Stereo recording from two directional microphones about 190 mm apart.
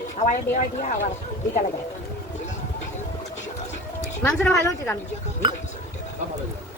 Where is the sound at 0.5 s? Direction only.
40° left (ahead or behind).